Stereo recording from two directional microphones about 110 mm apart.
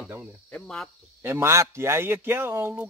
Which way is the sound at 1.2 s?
25° right (ahead or behind).